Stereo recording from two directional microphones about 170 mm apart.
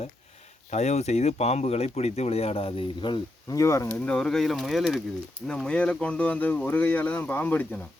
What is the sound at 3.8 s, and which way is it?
Speech, 5° left (ahead or behind).